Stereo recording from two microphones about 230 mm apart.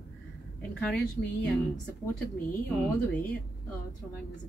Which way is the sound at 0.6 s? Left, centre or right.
Centre.